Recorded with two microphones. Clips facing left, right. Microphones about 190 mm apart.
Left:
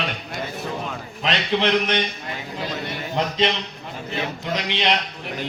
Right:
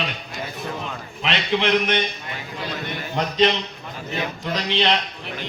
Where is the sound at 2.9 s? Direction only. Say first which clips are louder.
Even; 25° left (ahead or behind).